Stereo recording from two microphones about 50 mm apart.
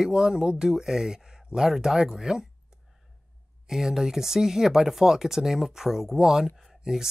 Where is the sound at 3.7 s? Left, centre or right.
Centre.